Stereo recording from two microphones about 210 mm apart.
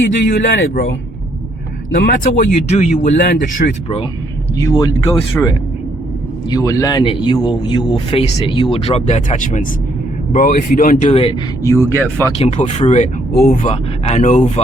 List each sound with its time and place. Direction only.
0.6 s speech: 55° left (ahead or behind)
2.0 s speech: 45° left (ahead or behind)
2.6 s speech: 30° left (ahead or behind)
3.2 s speech: 55° left (ahead or behind)
3.6 s speech: 40° left (ahead or behind)
4.5 s speech: 15° left (ahead or behind)
11.6 s speech: 15° left (ahead or behind)
12.4 s speech: 35° left (ahead or behind)
13.3 s speech: 45° left (ahead or behind)